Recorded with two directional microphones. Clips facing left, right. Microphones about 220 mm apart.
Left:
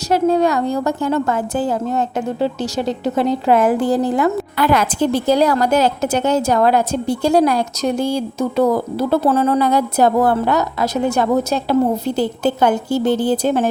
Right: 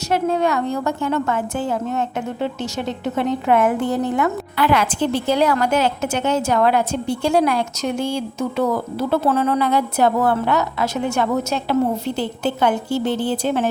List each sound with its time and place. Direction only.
0.1 s a woman's voice: 35° left (ahead or behind)